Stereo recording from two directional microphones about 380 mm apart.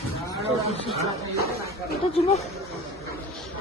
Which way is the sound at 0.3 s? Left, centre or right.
Centre.